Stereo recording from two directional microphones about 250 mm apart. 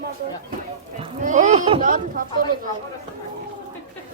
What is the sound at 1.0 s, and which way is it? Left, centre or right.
Livestock, right.